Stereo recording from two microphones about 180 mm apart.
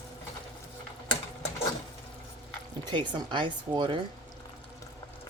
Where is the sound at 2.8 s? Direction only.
25° right (ahead or behind).